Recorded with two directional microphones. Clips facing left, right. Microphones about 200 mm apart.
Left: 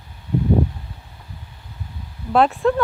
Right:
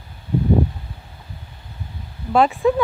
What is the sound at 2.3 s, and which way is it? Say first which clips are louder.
Speech: even; centre (ahead or behind).